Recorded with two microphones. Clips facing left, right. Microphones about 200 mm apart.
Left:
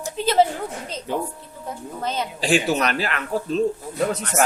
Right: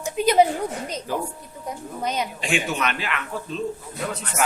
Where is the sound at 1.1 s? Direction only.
25° left (ahead or behind).